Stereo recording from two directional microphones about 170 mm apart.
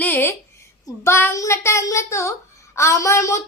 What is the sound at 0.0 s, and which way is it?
Speech, 10° left (ahead or behind).